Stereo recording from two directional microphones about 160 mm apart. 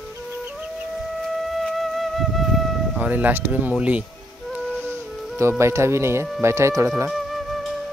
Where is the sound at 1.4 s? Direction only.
Centre (ahead or behind).